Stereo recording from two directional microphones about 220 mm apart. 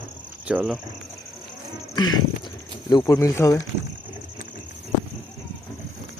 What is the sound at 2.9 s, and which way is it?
Speech, 15° left (ahead or behind).